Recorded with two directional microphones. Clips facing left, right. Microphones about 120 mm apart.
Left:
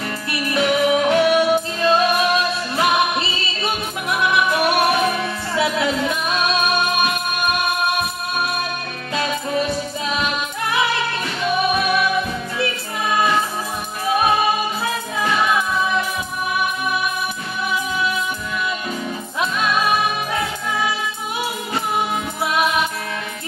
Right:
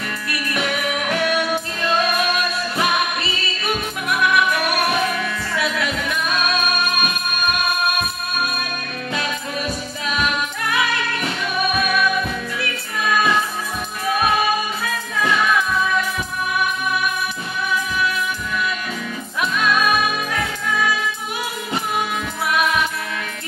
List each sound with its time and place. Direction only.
0.3 s music: 25° left (ahead or behind)
9.1 s music: 25° left (ahead or behind)
19.4 s music: 25° left (ahead or behind)
22.5 s music: 25° left (ahead or behind)